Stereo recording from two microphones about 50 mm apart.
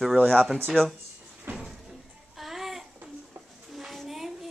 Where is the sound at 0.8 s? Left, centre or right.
Centre.